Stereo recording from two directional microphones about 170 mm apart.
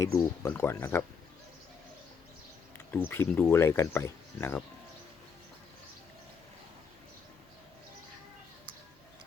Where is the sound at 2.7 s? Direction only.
10° left (ahead or behind).